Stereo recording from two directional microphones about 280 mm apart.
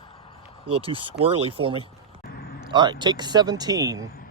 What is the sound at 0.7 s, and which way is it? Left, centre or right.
Speech, centre.